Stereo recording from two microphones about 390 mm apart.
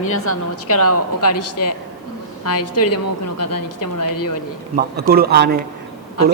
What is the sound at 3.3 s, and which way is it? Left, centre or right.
Speech, left.